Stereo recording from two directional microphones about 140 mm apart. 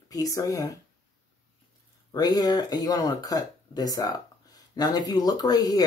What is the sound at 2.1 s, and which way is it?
Speech, 25° left (ahead or behind).